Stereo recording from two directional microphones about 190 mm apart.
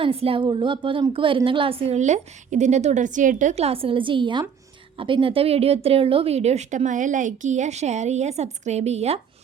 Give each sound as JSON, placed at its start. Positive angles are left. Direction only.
{"t": 0.0, "sound": "a woman's voice", "side_deg": -30}